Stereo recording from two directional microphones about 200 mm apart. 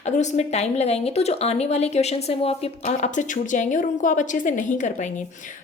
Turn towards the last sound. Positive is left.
turn(degrees=40)  # may be behind; listen again after turning